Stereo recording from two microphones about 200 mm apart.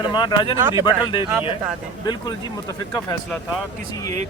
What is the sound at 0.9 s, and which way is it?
Speech, 25° left (ahead or behind).